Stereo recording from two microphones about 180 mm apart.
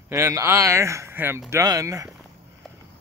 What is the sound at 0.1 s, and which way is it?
Speech, 15° right (ahead or behind).